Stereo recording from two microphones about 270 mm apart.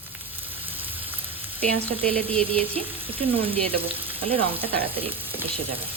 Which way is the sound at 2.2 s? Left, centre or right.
Right.